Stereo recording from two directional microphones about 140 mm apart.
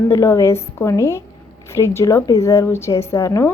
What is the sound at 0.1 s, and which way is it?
A woman's voice, 20° left (ahead or behind).